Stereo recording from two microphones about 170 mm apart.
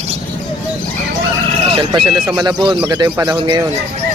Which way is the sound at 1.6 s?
30° right (ahead or behind).